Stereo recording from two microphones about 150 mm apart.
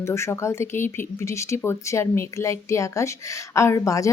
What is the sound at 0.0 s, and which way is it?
Speech, 20° left (ahead or behind).